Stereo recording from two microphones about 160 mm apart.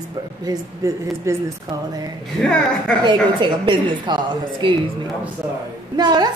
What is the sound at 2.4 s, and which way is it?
Speech, 5° left (ahead or behind).